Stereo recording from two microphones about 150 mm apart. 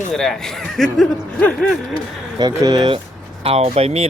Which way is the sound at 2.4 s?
25° right (ahead or behind).